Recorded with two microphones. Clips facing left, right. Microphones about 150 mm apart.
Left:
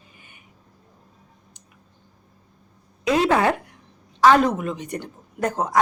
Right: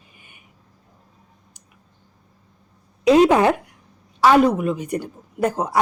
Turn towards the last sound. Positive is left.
turn(degrees=-10)  # may be behind; listen again after turning